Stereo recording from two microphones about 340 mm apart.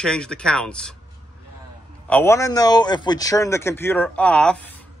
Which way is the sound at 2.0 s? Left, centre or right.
Centre.